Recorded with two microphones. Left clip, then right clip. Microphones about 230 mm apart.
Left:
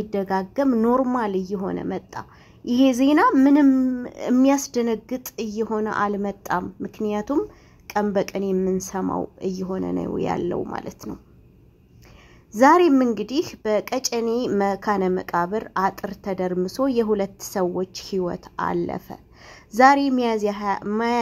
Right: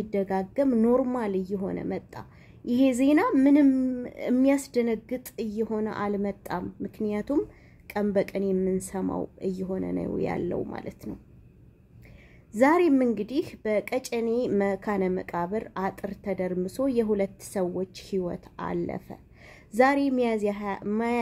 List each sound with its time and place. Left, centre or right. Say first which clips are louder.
0.0 s a woman's voice: left 4 dB; centre
12.5 s a woman's voice: left 6 dB; centre